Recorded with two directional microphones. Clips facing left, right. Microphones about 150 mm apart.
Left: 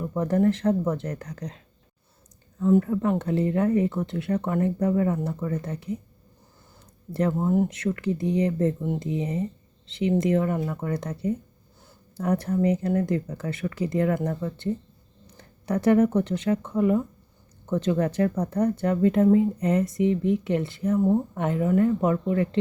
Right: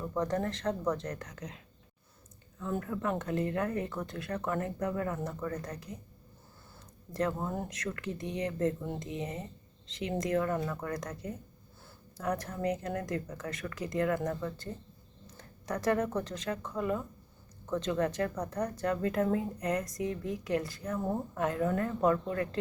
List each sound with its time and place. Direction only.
0.2 s speech: 30° left (ahead or behind)
2.8 s speech: 25° left (ahead or behind)
7.1 s speech: 30° left (ahead or behind)
7.3 s speech: 15° left (ahead or behind)
7.7 s speech: 30° left (ahead or behind)
17.7 s speech: 30° left (ahead or behind)
21.6 s speech: 15° left (ahead or behind)